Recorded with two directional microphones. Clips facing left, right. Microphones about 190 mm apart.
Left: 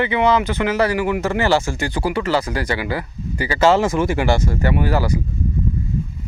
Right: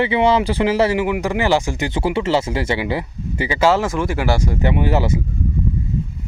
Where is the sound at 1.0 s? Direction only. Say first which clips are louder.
Even; 15° right (ahead or behind).